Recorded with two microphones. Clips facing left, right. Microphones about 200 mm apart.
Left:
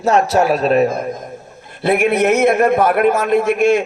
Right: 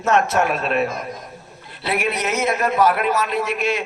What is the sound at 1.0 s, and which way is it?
A man's voice, 50° left (ahead or behind).